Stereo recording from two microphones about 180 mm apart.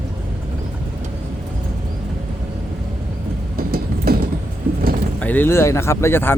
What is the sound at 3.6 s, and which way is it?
Train, 55° right (ahead or behind).